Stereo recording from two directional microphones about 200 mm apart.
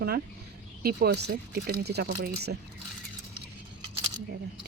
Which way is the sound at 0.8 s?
50° right (ahead or behind).